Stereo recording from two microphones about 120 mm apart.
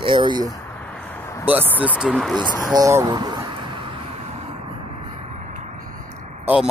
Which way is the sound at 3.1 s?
40° right (ahead or behind).